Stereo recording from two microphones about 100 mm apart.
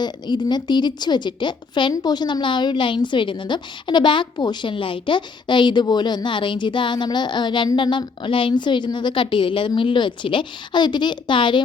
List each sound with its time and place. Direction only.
0.0 s a woman's voice: 45° left (ahead or behind)